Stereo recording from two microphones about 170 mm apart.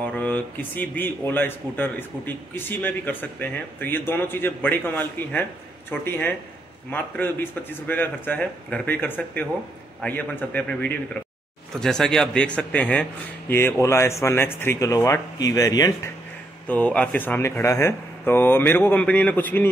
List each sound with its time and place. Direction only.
0.0 s speech: 10° left (ahead or behind)
16.6 s speech: 10° left (ahead or behind)